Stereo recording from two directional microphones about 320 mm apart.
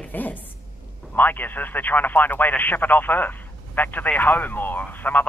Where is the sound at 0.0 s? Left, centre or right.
Centre.